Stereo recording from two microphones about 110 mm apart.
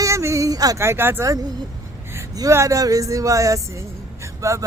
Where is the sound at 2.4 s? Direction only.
30° right (ahead or behind).